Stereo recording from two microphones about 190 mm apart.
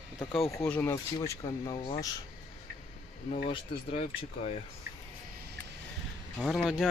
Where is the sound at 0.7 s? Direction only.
10° left (ahead or behind).